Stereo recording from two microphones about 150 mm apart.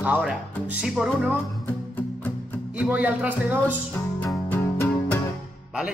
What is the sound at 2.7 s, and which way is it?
Speech, 10° right (ahead or behind).